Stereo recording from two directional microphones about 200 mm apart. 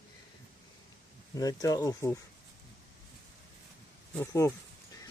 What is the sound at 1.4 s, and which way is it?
Speech, 15° left (ahead or behind).